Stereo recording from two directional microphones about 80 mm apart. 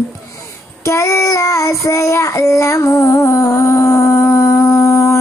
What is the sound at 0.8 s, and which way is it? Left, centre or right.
Child singing, left.